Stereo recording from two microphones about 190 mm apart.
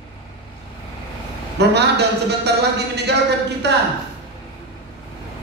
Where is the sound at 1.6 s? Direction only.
60° right (ahead or behind).